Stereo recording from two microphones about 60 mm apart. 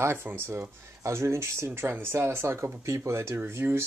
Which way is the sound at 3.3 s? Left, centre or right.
Right.